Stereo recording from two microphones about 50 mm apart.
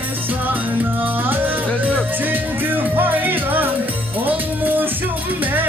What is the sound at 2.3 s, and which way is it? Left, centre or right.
Music, right.